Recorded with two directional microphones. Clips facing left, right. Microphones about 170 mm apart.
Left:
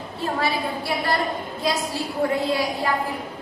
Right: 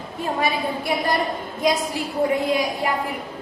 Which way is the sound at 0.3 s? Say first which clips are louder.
Right 2 dB; 15° right (ahead or behind).